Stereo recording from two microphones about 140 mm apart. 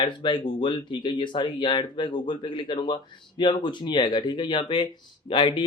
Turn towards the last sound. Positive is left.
turn(degrees=35)  # may be behind; listen again after turning